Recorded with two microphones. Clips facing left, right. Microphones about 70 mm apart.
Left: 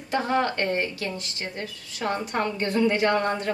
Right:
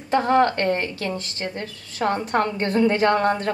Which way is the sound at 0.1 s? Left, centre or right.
Right.